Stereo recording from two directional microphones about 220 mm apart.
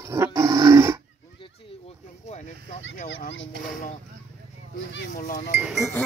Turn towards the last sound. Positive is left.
turn(degrees=0)  # may be behind; listen again after turning